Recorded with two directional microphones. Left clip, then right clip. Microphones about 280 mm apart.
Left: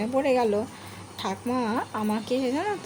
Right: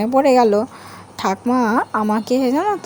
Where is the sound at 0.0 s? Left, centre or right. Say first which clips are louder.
Right 10 dB; right.